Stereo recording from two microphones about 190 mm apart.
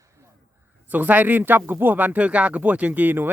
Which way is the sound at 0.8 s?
10° right (ahead or behind).